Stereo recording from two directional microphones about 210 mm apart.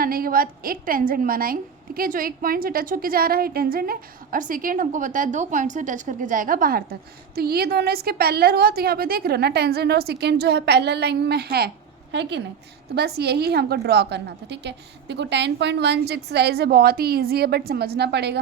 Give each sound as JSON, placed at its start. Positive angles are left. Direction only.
{"t": 0.0, "sound": "a woman's voice", "side_deg": -45}